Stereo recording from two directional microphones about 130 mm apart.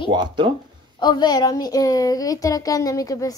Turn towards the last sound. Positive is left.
turn(degrees=25)  # may be behind; listen again after turning